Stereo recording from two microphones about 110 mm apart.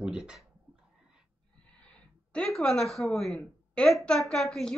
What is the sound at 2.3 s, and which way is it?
A woman's voice, 5° left (ahead or behind).